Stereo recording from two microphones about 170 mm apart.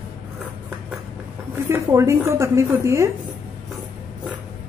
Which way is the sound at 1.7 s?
15° right (ahead or behind).